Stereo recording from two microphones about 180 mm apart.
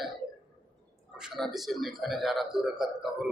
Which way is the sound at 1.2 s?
Centre (ahead or behind).